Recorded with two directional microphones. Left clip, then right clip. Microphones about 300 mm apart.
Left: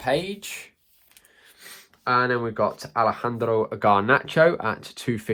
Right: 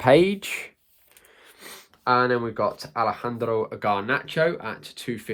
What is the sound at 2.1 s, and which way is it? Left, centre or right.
Speech, centre.